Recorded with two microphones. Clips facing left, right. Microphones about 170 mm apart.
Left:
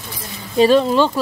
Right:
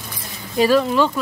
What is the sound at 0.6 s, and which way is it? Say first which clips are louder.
Speech: left 3 dB; 25° left (ahead or behind).